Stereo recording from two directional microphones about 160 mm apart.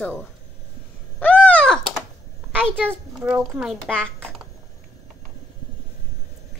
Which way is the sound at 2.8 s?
10° right (ahead or behind).